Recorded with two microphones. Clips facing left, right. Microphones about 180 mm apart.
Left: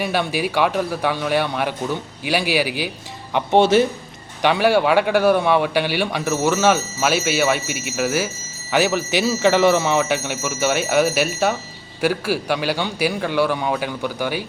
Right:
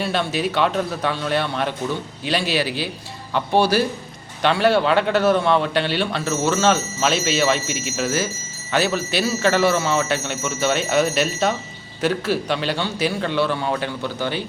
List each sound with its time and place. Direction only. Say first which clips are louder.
0.0 s a man's voice: left 1 dB; 10° left (ahead or behind)